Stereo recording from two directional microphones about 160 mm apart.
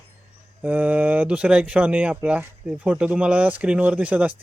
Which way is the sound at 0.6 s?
10° right (ahead or behind).